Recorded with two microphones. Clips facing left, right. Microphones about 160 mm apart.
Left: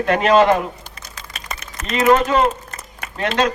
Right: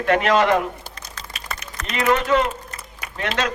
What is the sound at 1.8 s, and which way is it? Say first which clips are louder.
Speech: left 5 dB; 25° left (ahead or behind).